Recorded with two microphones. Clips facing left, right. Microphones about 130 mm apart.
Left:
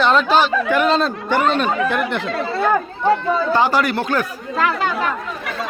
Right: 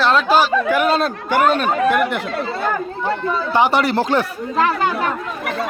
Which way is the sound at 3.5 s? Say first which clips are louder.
Right 4 dB; 20° right (ahead or behind).